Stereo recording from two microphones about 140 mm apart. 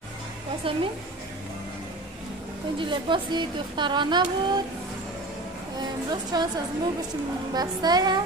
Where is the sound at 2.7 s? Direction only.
35° right (ahead or behind).